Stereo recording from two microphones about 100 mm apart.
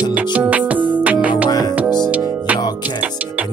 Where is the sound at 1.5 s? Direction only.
40° left (ahead or behind).